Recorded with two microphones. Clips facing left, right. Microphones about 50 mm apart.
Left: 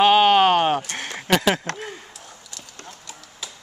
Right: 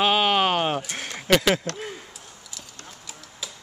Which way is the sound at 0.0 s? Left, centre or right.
Centre.